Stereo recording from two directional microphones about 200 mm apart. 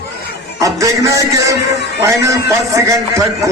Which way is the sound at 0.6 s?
15° right (ahead or behind).